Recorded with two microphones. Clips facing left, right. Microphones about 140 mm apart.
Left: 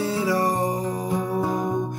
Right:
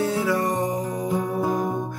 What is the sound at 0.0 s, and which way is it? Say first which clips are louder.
Music: right 1 dB; 60° right (ahead or behind).